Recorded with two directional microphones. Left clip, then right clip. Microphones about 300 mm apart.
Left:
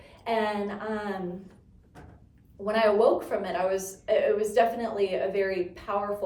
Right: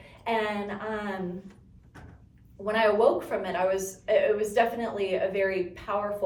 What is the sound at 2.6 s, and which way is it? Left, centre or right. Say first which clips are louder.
A woman's voice: even; centre.